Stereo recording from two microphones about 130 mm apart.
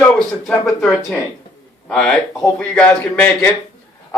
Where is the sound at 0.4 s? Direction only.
5° left (ahead or behind).